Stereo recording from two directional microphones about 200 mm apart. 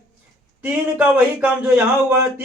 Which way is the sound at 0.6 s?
5° right (ahead or behind).